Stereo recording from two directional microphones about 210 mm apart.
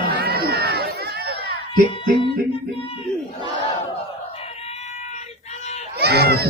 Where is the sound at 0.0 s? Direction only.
50° right (ahead or behind).